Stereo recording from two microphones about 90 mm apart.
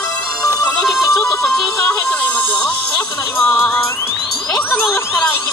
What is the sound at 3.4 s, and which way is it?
Music, 30° left (ahead or behind).